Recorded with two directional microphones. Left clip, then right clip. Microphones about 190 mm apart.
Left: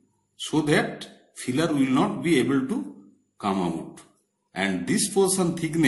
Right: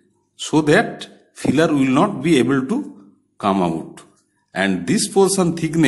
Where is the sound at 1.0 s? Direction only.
35° right (ahead or behind).